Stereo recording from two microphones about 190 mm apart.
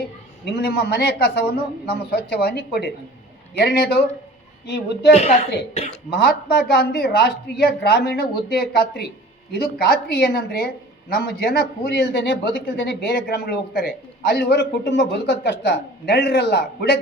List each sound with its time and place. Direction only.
0.4 s speech: 60° left (ahead or behind)
5.1 s speech: 35° left (ahead or behind)
6.1 s a woman's voice: 55° left (ahead or behind)